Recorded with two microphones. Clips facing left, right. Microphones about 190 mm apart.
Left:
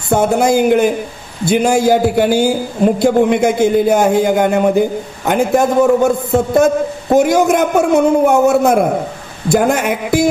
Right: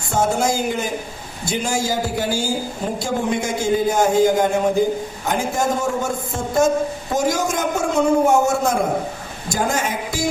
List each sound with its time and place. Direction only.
0.1 s a man's voice: 60° left (ahead or behind)